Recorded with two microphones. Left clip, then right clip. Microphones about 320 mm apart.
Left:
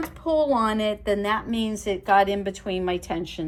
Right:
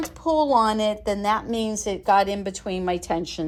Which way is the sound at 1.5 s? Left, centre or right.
Right.